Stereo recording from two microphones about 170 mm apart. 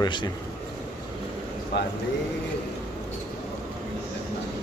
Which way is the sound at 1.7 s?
90° left.